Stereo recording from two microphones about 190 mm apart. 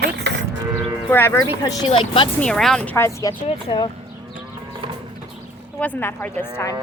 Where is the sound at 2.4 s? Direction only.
5° left (ahead or behind); by 3.9 s 25° left (ahead or behind).